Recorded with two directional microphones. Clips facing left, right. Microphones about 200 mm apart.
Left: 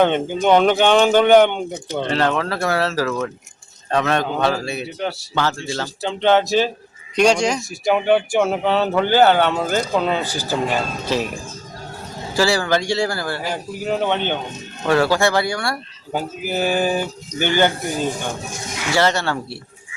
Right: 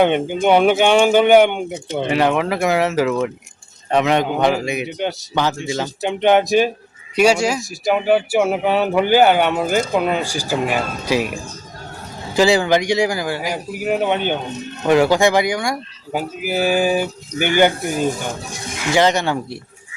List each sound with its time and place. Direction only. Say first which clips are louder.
0.4 s speech: right 1 dB; 10° right (ahead or behind)
18.9 s speech: right 3 dB; 15° right (ahead or behind)